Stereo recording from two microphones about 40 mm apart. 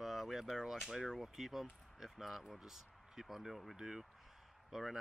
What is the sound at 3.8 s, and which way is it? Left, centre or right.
Speech, centre.